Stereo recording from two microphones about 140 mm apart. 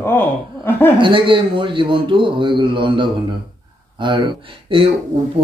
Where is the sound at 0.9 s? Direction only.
35° right (ahead or behind).